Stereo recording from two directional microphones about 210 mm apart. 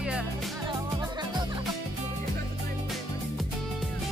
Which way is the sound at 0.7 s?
20° right (ahead or behind).